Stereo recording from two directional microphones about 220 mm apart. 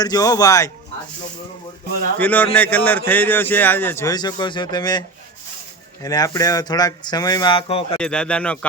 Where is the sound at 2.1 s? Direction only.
5° left (ahead or behind); by 7.9 s 25° left (ahead or behind).